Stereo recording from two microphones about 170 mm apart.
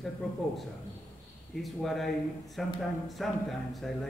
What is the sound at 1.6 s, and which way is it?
A man's voice, centre (ahead or behind).